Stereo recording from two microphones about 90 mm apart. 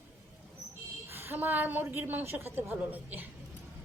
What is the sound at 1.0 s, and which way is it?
A woman's voice, 25° right (ahead or behind).